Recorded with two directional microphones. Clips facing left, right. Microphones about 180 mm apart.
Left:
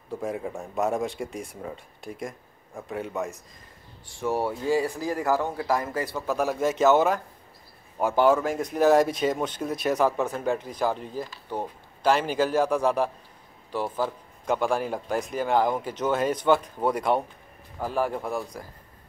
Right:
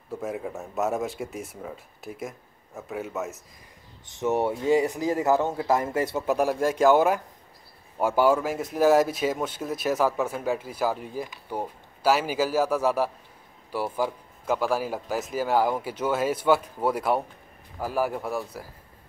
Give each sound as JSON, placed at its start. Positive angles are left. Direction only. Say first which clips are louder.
{"t": 0.1, "sound": "a man's voice", "louder": "left 1 dB", "side_deg": 0}
{"t": 4.1, "sound": "speech", "louder": "right 2 dB", "side_deg": -20}
{"t": 6.1, "sound": "a man's voice", "louder": "right 1 dB", "side_deg": -5}